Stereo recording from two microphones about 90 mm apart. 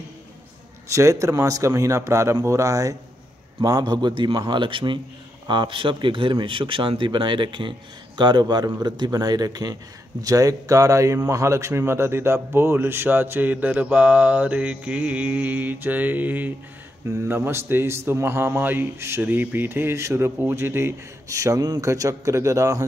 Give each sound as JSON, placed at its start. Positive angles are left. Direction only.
{"t": 0.8, "sound": "a man's voice", "side_deg": -35}
{"t": 3.6, "sound": "a man's voice", "side_deg": -50}
{"t": 8.2, "sound": "a man's voice", "side_deg": -55}